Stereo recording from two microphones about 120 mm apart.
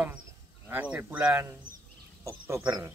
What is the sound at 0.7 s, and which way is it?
Speech, 15° right (ahead or behind).